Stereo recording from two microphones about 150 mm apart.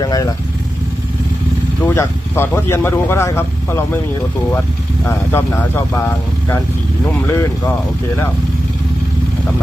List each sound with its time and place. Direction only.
0.0 s speech: 25° left (ahead or behind)
1.8 s speech: 15° left (ahead or behind)
5.0 s speech: 15° left (ahead or behind)
7.1 s speech: 15° left (ahead or behind)